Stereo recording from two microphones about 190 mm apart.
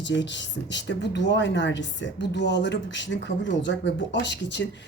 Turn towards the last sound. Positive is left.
turn(degrees=65)  # may be behind; listen again after turning